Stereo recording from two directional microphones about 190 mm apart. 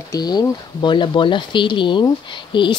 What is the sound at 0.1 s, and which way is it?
Speech, 20° left (ahead or behind).